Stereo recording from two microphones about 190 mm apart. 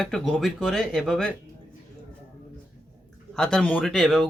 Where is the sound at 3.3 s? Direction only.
5° left (ahead or behind).